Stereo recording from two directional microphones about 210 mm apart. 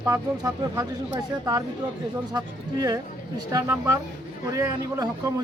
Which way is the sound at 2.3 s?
20° right (ahead or behind).